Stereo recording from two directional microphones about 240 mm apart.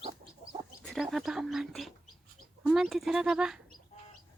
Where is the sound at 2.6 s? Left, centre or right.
Centre.